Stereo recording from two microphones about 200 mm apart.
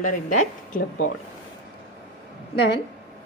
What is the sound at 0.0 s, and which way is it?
Speech, 40° left (ahead or behind).